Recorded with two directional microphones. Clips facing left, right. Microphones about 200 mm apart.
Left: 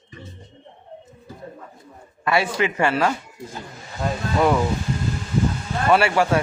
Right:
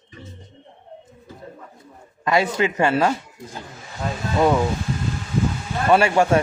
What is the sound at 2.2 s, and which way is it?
Speech, 20° right (ahead or behind).